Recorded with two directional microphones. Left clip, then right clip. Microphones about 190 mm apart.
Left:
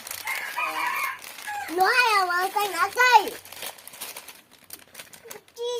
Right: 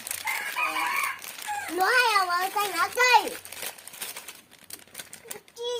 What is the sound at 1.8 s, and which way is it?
A child's voice, 30° left (ahead or behind).